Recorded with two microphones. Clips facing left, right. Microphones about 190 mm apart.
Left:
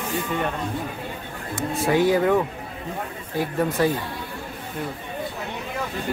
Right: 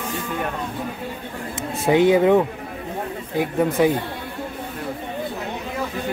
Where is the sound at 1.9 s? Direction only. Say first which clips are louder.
Right 4 dB; 20° right (ahead or behind).